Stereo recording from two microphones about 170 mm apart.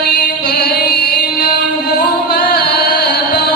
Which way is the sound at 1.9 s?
70° left (ahead or behind).